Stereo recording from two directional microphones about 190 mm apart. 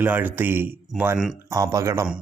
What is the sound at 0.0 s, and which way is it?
Speech, 10° right (ahead or behind).